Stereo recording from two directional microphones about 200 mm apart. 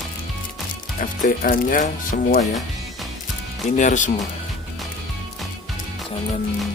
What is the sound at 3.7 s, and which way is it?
Speech, 35° left (ahead or behind).